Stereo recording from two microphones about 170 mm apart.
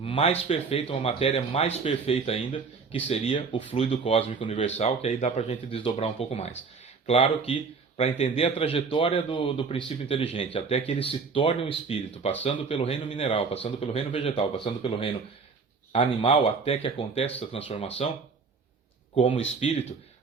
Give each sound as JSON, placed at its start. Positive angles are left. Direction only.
{"t": 0.0, "sound": "speech", "side_deg": 35}
{"t": 19.1, "sound": "speech", "side_deg": 30}